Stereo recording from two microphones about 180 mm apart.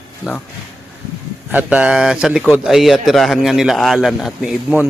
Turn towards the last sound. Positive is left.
turn(degrees=-5)  # may be behind; listen again after turning